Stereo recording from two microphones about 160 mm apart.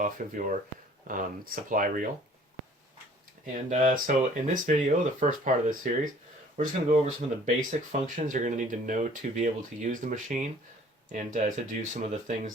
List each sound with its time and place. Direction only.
0.2 s speech: 55° right (ahead or behind)
3.4 s speech: 55° right (ahead or behind)